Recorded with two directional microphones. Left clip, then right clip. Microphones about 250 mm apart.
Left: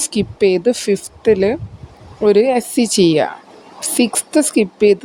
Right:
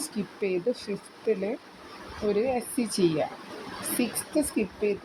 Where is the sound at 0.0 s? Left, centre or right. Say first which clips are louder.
Left 16 dB; left.